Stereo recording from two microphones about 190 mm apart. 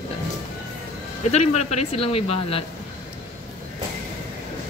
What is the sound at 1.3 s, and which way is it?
Speech, 35° left (ahead or behind).